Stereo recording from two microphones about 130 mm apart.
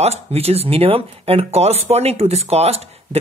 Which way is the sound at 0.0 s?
50° right (ahead or behind).